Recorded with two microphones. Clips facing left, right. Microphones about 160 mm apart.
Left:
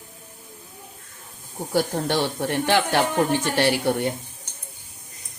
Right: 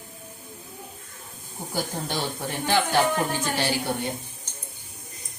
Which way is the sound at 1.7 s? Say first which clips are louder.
Left 7 dB; 70° left (ahead or behind).